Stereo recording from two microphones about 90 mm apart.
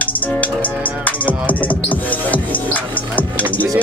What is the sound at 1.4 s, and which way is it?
Music, 15° left (ahead or behind).